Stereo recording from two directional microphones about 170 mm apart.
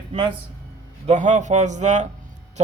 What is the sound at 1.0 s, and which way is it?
A man's voice, 45° right (ahead or behind).